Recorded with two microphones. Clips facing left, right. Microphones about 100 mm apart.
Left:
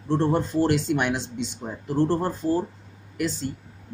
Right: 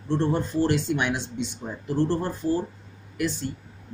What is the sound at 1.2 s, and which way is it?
Speech, 55° right (ahead or behind).